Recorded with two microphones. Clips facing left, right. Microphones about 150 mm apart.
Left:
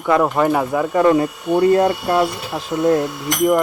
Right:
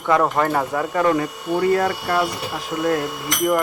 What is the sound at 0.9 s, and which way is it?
Speech, 25° left (ahead or behind).